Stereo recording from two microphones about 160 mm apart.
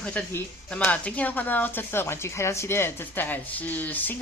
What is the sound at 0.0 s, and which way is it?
Speech, 10° left (ahead or behind).